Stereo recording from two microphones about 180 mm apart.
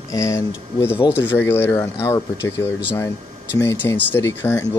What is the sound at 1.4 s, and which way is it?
Speech, 10° left (ahead or behind).